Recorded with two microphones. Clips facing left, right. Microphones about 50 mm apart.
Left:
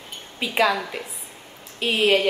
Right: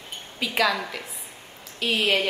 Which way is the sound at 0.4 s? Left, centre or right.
Left.